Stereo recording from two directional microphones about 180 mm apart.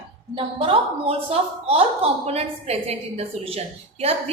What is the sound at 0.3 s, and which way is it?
A woman's voice, 30° right (ahead or behind).